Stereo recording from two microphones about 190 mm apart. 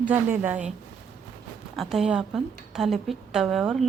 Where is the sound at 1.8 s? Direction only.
Centre (ahead or behind).